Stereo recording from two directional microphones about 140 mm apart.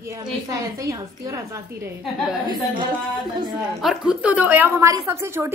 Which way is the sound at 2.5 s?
35° right (ahead or behind).